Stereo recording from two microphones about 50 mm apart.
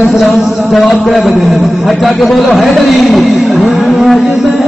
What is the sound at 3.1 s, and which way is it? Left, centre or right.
Music, centre.